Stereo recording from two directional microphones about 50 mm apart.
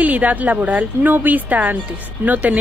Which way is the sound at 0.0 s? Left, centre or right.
Right.